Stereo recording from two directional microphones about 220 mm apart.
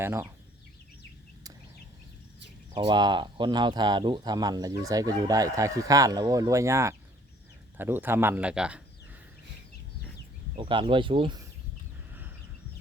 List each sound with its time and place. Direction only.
0.0 s speech: 10° right (ahead or behind)
2.7 s speech: 20° right (ahead or behind)
10.6 s speech: 20° right (ahead or behind)